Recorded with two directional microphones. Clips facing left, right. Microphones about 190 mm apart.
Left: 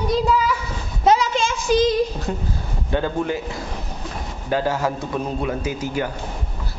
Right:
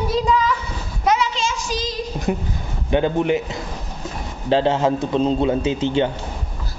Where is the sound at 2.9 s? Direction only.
20° right (ahead or behind).